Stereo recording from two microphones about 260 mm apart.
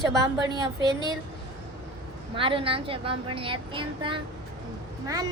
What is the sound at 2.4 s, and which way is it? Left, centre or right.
A woman's voice, centre.